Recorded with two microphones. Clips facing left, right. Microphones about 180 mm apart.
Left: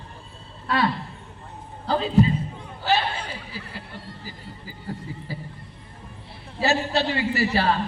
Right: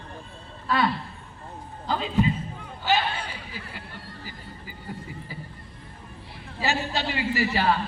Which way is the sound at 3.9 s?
25° left (ahead or behind).